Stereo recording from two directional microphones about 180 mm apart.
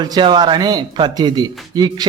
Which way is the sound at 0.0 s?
25° right (ahead or behind).